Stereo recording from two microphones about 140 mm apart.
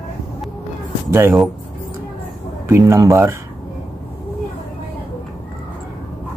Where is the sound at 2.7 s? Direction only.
25° right (ahead or behind).